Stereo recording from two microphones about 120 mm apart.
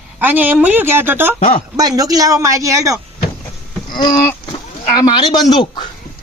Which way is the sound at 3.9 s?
40° left (ahead or behind).